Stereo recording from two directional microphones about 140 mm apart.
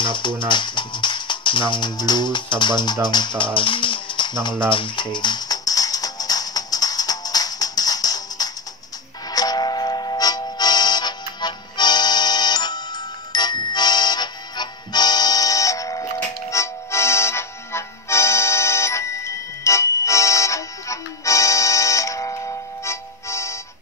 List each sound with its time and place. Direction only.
0.0 s music: 35° left (ahead or behind)